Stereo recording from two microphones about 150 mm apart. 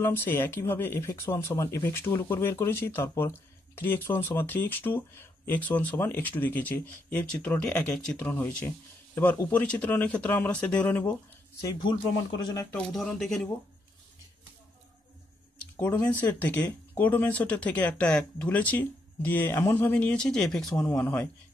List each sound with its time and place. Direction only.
0.0 s speech: 15° left (ahead or behind)
11.6 s speech: 30° left (ahead or behind)
12.7 s speech: 5° left (ahead or behind)
15.7 s a sound: 15° left (ahead or behind)
16.2 s speech: 10° left (ahead or behind)